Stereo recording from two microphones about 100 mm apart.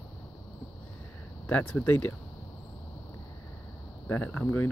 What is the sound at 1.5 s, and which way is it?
Speech, 10° left (ahead or behind).